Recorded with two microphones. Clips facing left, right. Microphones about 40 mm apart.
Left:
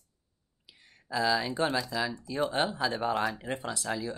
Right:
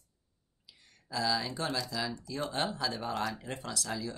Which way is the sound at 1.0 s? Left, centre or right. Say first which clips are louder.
Left 4 dB; left.